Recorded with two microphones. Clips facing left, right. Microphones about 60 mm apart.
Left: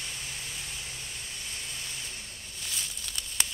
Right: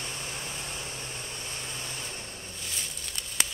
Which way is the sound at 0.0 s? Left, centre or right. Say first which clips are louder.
Right 3 dB; right.